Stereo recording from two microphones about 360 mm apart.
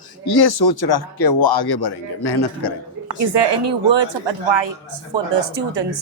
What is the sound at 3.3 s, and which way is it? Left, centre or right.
Speech, right.